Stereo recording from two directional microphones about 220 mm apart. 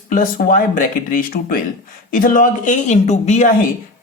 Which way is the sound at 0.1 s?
40° left (ahead or behind).